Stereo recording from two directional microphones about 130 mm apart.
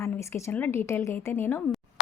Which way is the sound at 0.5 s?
15° left (ahead or behind).